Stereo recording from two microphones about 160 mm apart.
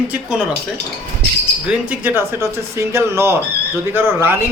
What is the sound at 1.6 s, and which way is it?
Speech, 10° right (ahead or behind).